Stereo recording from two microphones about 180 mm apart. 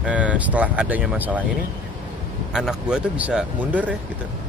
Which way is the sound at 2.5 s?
5° right (ahead or behind).